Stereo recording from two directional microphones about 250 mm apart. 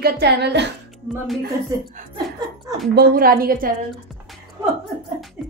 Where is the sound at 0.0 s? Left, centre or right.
Right.